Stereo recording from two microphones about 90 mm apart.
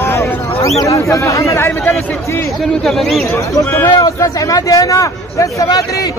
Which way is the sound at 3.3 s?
30° left (ahead or behind).